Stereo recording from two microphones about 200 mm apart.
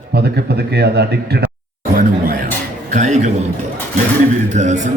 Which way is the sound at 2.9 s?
35° right (ahead or behind).